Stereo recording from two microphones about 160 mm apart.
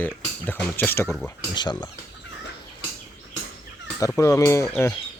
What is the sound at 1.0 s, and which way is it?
Speech, centre (ahead or behind).